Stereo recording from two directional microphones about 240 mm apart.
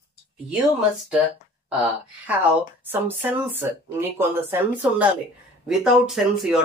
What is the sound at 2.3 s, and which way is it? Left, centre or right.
Speech, centre.